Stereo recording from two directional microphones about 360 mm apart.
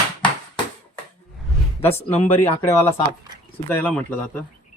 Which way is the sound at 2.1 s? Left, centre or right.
Centre.